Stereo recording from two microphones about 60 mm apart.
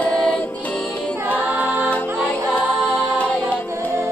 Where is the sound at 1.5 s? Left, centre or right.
Right.